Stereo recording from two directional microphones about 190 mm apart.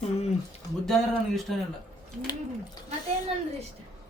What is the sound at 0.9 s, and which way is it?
Speech, centre (ahead or behind).